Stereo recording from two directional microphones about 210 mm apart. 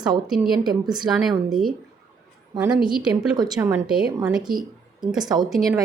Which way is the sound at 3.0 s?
5° right (ahead or behind).